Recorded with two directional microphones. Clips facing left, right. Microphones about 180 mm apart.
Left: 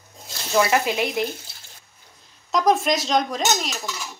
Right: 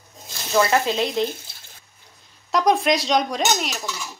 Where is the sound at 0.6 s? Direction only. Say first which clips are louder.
Right 1 dB; 15° left (ahead or behind).